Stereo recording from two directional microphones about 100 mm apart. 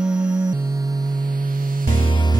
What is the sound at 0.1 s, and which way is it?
Music, 45° right (ahead or behind).